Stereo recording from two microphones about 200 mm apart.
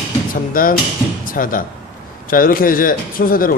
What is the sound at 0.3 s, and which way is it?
Speech, 45° left (ahead or behind).